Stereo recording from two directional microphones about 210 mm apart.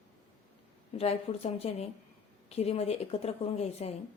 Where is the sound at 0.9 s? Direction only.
30° left (ahead or behind).